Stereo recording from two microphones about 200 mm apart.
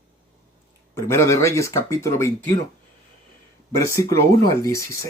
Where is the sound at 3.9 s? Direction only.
15° left (ahead or behind).